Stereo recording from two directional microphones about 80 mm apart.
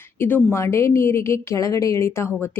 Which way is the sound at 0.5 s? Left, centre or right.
Left.